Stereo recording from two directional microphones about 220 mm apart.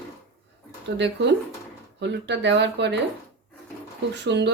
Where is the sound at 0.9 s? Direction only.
50° right (ahead or behind).